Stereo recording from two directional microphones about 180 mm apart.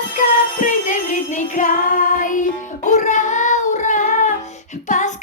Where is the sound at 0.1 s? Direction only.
45° left (ahead or behind).